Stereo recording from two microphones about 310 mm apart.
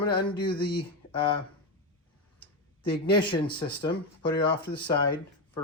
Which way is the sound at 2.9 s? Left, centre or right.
Centre.